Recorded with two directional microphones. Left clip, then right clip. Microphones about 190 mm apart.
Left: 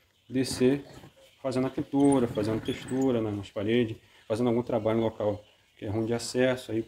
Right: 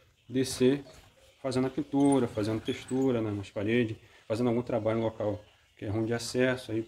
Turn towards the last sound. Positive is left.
turn(degrees=15)  # may be behind; listen again after turning